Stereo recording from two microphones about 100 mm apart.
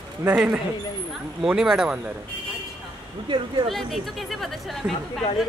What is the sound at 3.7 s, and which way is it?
Speech, centre (ahead or behind).